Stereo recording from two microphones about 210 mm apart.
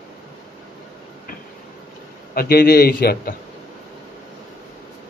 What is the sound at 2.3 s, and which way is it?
Speech, 45° left (ahead or behind).